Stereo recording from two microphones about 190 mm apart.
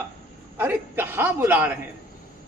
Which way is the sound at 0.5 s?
10° right (ahead or behind).